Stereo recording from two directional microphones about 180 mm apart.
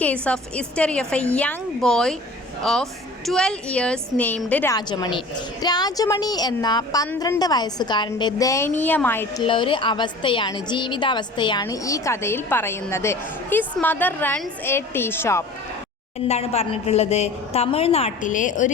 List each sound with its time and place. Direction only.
0.0 s a woman's voice: 5° left (ahead or behind)
3.2 s a woman's voice: 5° left (ahead or behind)
4.7 s a woman's voice: 25° left (ahead or behind)
9.4 s a woman's voice: 30° left (ahead or behind)
16.3 s a woman's voice: 35° left (ahead or behind)